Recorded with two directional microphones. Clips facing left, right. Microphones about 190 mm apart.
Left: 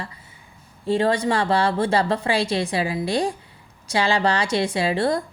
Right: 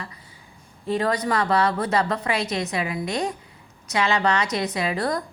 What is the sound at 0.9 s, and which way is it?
A woman's voice, 30° left (ahead or behind).